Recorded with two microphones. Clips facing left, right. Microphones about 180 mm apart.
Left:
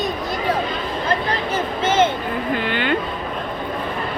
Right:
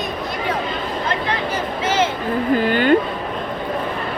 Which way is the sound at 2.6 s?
40° right (ahead or behind).